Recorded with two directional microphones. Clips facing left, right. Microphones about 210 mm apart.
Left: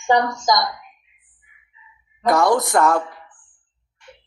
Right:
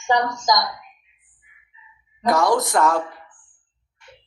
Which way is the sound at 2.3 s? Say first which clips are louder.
Left 2 dB; 55° left (ahead or behind).